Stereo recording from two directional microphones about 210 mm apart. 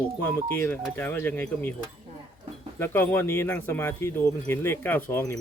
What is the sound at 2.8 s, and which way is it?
Speech, 10° left (ahead or behind).